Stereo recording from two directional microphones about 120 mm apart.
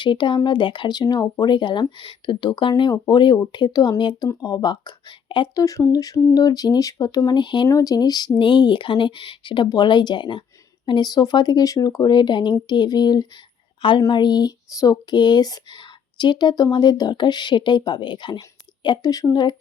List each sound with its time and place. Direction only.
0.0 s speech: 40° left (ahead or behind)
5.6 s speech: 30° left (ahead or behind)
7.7 s speech: 30° left (ahead or behind)